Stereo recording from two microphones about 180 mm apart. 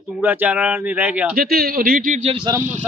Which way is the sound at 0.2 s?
10° right (ahead or behind).